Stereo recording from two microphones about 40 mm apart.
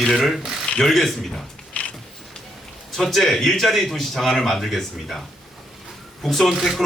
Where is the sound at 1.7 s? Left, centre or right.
Left.